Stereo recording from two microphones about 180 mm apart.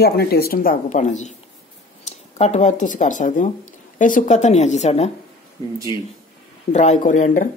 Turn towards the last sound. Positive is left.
turn(degrees=45)  # may be behind; listen again after turning